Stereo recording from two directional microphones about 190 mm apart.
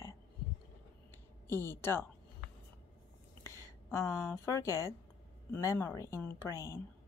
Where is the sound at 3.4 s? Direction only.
15° left (ahead or behind).